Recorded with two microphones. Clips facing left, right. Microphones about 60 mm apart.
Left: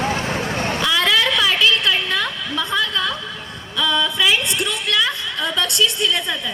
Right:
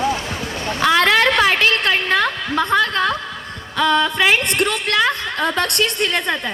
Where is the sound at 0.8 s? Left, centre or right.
Right.